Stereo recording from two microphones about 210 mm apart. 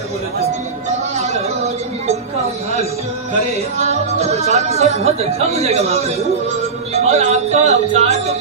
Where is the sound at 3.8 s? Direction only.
30° right (ahead or behind).